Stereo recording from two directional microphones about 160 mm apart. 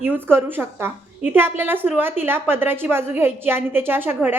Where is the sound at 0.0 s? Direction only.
15° right (ahead or behind).